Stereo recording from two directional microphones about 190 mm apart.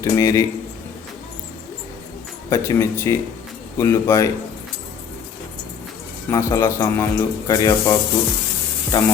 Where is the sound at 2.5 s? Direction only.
15° left (ahead or behind).